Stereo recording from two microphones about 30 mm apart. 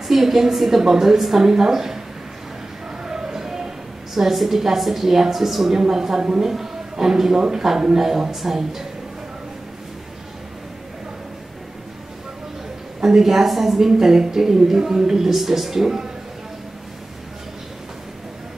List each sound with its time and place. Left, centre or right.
0.1 s a woman's voice: centre
1.4 s a woman's voice: centre
3.0 s a sound: right
4.1 s a woman's voice: centre
6.4 s a sound: centre
7.1 s a woman's voice: centre
13.0 s a woman's voice: centre
15.3 s a woman's voice: centre